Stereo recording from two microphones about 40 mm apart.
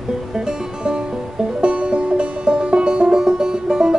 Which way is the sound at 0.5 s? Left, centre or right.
Centre.